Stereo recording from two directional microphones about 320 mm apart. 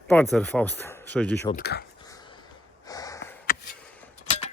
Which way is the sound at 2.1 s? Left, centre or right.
Centre.